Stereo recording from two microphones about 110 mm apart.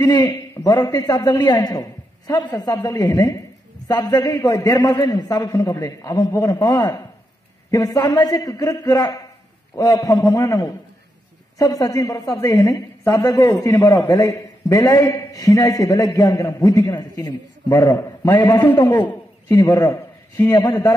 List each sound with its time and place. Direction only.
0.0 s a man's voice: 35° left (ahead or behind)